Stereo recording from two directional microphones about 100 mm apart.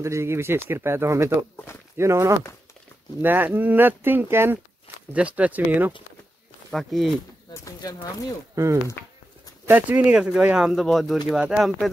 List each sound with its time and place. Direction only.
0.0 s speech: 30° right (ahead or behind)
6.7 s speech: centre (ahead or behind)
7.6 s speech: 40° left (ahead or behind)
9.7 s speech: 15° right (ahead or behind)